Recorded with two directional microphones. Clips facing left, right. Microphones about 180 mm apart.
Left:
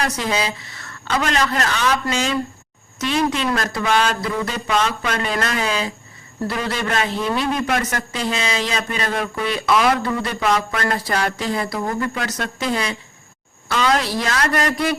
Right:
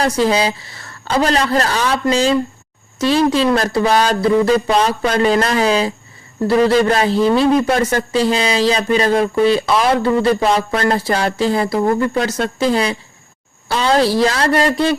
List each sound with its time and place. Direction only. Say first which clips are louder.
0.0 s a man's voice: right 7 dB; 30° right (ahead or behind)